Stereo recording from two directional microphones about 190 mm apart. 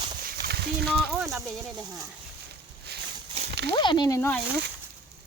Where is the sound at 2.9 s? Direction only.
60° right (ahead or behind).